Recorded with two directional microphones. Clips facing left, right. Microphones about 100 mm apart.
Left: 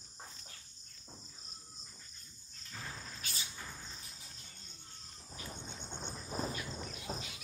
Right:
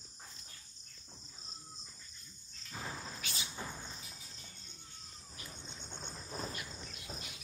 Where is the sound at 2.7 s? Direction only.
20° right (ahead or behind).